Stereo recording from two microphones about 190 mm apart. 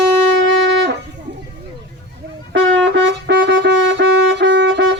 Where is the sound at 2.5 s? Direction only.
75° right (ahead or behind).